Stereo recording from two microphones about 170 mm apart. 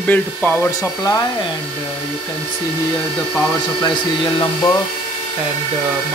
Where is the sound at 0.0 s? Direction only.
10° left (ahead or behind).